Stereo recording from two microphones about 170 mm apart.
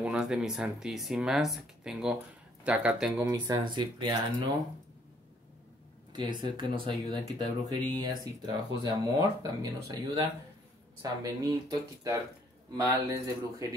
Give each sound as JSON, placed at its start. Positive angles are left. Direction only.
{"t": 0.0, "sound": "speech", "side_deg": -5}
{"t": 3.4, "sound": "speech", "side_deg": -25}
{"t": 6.1, "sound": "speech", "side_deg": -30}